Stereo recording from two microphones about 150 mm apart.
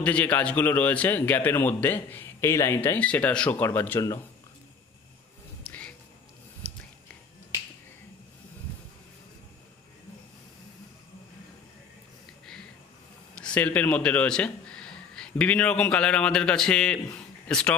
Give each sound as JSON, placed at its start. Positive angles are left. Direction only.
{"t": 0.0, "sound": "a man's voice", "side_deg": 10}
{"t": 5.7, "sound": "music", "side_deg": 10}
{"t": 6.6, "sound": "a sound", "side_deg": -45}
{"t": 13.3, "sound": "a man's voice", "side_deg": 5}